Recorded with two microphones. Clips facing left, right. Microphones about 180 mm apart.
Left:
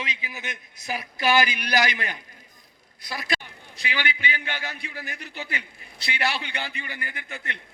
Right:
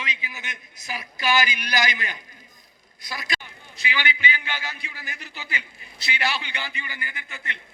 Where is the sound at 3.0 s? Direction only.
60° left (ahead or behind).